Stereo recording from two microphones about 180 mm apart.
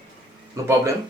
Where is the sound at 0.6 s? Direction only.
20° right (ahead or behind).